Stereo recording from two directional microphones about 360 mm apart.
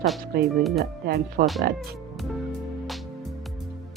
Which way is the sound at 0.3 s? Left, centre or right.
Right.